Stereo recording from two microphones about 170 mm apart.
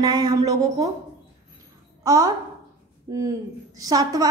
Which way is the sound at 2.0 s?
20° right (ahead or behind).